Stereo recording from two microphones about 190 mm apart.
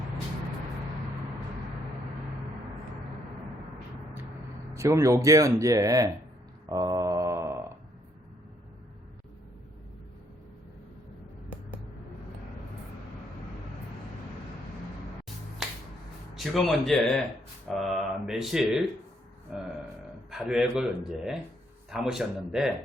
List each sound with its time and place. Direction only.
4.7 s speech: 15° right (ahead or behind)
6.7 s a sound: 20° right (ahead or behind)
15.6 s finger snapping: centre (ahead or behind)
16.3 s mantra: centre (ahead or behind)